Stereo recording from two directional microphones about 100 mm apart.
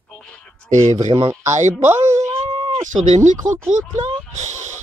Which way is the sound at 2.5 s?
55° right (ahead or behind).